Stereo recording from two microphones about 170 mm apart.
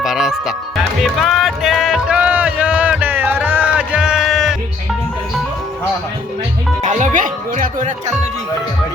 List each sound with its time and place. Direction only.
0.0 s music: 5° right (ahead or behind)
6.8 s speech: 50° right (ahead or behind)